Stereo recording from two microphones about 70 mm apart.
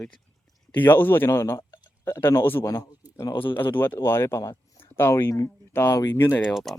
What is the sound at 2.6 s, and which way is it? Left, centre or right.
Speech, left.